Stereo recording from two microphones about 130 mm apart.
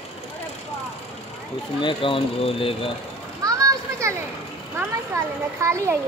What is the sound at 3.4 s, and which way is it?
Children playing, 25° right (ahead or behind).